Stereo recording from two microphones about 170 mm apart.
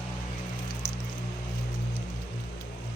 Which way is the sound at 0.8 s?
20° left (ahead or behind).